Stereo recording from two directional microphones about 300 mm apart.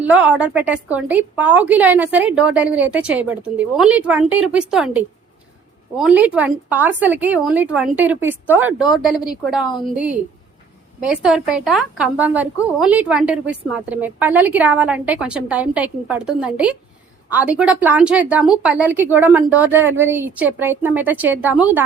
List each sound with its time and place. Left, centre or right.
0.0 s a woman's voice: centre